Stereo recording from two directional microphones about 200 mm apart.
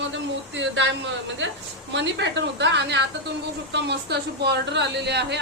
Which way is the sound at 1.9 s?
60° right (ahead or behind).